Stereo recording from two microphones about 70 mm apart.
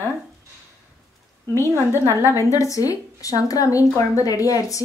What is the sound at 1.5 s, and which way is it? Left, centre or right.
Speech, left.